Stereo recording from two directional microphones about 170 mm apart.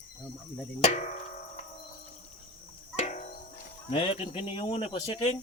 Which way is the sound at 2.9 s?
40° left (ahead or behind).